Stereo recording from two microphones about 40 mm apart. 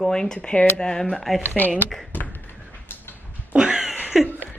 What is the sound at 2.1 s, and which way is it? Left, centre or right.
Tap, left.